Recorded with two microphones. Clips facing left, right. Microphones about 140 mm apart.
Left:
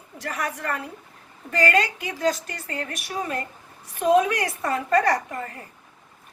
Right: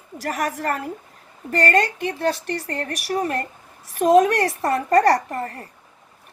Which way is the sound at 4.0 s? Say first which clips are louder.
Right 4 dB; 40° right (ahead or behind).